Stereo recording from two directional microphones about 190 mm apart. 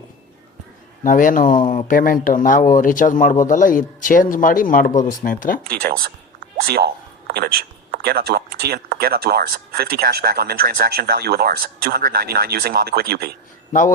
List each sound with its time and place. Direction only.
1.0 s speech: 45° left (ahead or behind)
5.8 s speech: 50° right (ahead or behind)